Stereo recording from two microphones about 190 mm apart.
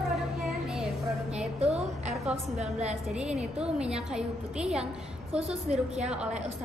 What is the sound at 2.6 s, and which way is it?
Speech, 35° right (ahead or behind).